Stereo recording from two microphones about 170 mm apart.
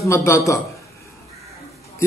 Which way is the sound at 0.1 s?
15° left (ahead or behind).